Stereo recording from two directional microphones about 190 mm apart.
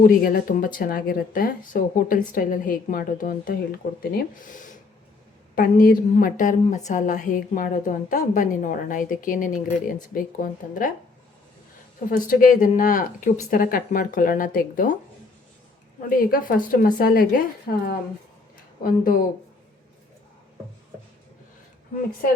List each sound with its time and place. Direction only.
0.0 s a woman's voice: 50° left (ahead or behind)
12.1 s a woman's voice: 45° left (ahead or behind)
16.0 s a woman's voice: 50° left (ahead or behind)